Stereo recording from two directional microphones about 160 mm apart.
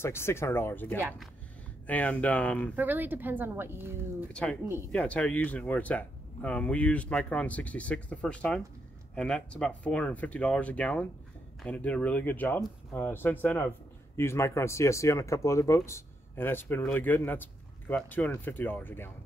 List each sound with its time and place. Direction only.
0.0 s speech: 15° left (ahead or behind)
2.7 s a woman's voice: 10° right (ahead or behind)
4.3 s speech: 5° left (ahead or behind)